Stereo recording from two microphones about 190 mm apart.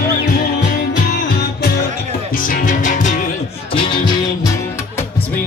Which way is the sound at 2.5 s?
45° left (ahead or behind).